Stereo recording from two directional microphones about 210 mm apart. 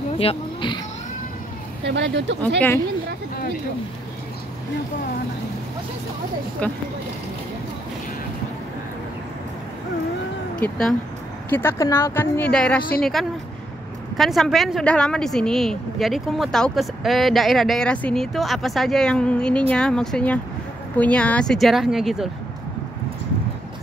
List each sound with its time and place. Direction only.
0.2 s speech: 25° left (ahead or behind)
1.9 s speech: 55° right (ahead or behind)
6.6 s speech: 5° left (ahead or behind)
10.6 s speech: centre (ahead or behind)